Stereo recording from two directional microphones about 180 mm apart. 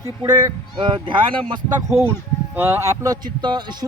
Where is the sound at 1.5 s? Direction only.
15° right (ahead or behind).